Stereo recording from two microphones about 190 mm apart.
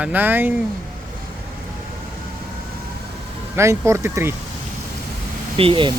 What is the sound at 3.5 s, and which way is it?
Speech, 15° right (ahead or behind).